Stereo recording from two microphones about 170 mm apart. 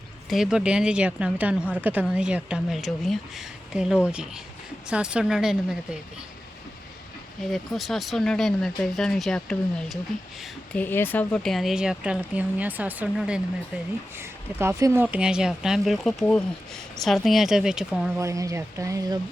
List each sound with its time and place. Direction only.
0.3 s speech: 5° right (ahead or behind)
7.5 s speech: centre (ahead or behind)
10.8 s speech: 10° left (ahead or behind); by 18.1 s 5° right (ahead or behind)
18.2 s speech: 20° right (ahead or behind)